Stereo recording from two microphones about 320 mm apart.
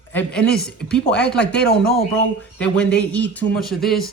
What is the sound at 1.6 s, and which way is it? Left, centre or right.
Speech, left.